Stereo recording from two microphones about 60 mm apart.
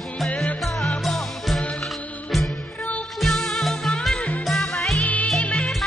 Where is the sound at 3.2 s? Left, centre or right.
Centre.